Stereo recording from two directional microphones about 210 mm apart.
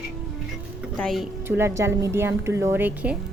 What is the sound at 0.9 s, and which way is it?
Speech, centre (ahead or behind).